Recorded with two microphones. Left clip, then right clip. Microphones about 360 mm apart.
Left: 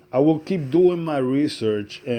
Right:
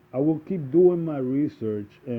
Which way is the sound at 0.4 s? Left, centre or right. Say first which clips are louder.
Left 1 dB; centre.